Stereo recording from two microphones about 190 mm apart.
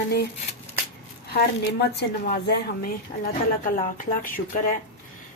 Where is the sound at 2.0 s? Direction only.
55° left (ahead or behind).